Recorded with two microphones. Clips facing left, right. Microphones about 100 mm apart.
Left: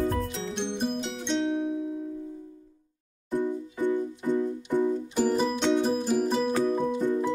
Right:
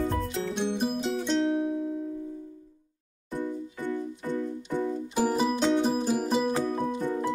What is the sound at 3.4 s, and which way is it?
Music, 15° left (ahead or behind).